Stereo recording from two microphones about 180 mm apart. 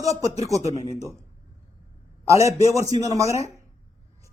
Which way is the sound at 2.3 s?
15° right (ahead or behind).